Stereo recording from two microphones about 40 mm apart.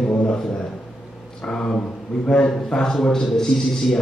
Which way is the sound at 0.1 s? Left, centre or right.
Left.